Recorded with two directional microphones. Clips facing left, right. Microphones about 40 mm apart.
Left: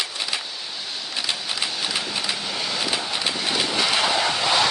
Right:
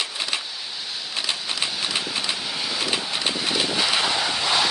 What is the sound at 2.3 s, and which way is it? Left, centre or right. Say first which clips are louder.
Vehicle: left 1 dB; centre.